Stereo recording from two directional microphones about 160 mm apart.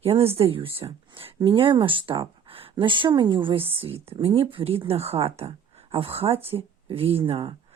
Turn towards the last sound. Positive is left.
turn(degrees=-35)  # may be behind; listen again after turning